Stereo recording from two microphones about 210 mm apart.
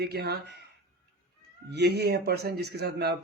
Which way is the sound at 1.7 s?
50° right (ahead or behind).